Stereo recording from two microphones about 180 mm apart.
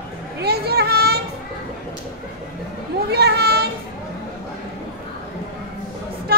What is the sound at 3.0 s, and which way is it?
Children playing, 65° right (ahead or behind).